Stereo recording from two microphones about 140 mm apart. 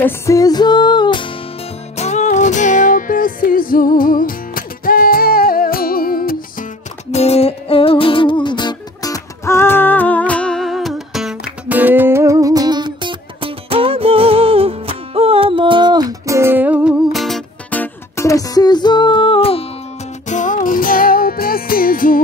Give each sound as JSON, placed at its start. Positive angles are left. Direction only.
{"t": 0.0, "sound": "music", "side_deg": 25}
{"t": 2.0, "sound": "music", "side_deg": 55}
{"t": 7.1, "sound": "music", "side_deg": 50}
{"t": 11.8, "sound": "music", "side_deg": -15}
{"t": 17.1, "sound": "music", "side_deg": 0}
{"t": 17.6, "sound": "music", "side_deg": 15}
{"t": 20.2, "sound": "music", "side_deg": 60}